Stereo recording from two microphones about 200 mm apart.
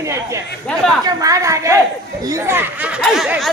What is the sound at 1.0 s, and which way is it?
A woman's voice, 15° right (ahead or behind).